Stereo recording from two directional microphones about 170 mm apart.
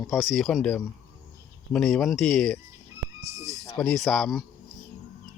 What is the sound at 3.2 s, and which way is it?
Speech, 20° right (ahead or behind).